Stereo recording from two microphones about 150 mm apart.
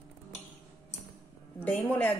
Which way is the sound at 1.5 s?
15° left (ahead or behind).